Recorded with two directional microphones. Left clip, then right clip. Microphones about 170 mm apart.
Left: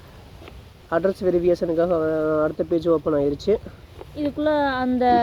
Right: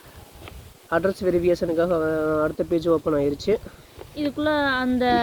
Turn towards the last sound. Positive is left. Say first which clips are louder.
# left 2 dB
turn(degrees=-20)  # may be behind; listen again after turning